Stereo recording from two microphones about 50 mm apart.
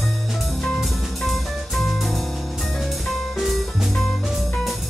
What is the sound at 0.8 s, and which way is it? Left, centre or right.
Music, centre.